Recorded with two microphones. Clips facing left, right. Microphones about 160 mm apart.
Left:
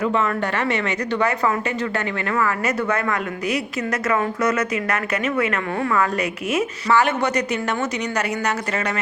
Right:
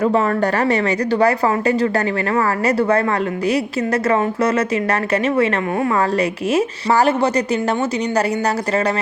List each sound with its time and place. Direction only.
0.0 s speech: 40° right (ahead or behind)